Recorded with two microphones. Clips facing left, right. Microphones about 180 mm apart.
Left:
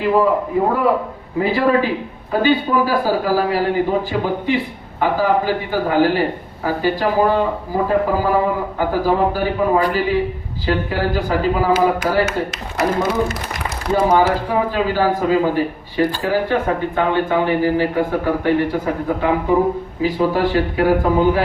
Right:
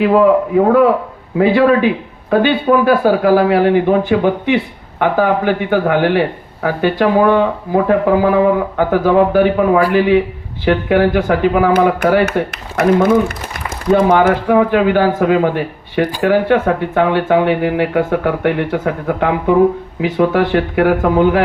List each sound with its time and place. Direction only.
0.0 s a man's voice: 75° right (ahead or behind)